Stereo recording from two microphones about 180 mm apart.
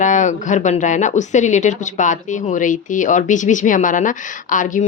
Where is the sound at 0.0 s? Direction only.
45° left (ahead or behind).